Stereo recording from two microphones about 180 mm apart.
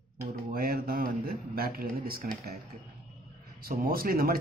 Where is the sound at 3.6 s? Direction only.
55° right (ahead or behind).